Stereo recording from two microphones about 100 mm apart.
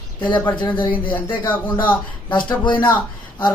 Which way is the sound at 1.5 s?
15° left (ahead or behind).